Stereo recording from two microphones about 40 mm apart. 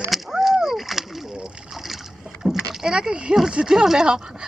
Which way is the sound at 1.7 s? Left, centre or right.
Centre.